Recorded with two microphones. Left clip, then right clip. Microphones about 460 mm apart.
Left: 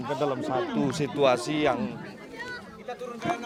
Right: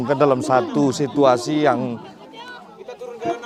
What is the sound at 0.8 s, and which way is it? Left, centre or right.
Speech, right.